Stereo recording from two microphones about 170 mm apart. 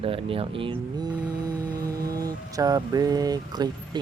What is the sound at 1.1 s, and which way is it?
Music, 5° right (ahead or behind).